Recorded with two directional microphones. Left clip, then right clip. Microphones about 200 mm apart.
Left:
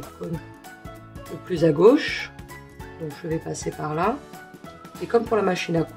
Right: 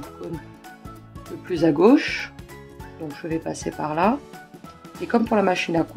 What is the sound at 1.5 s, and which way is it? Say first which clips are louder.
Speech: even; 30° right (ahead or behind).